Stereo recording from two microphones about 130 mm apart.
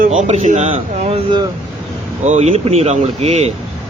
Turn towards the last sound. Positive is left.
turn(degrees=-55)  # may be behind; listen again after turning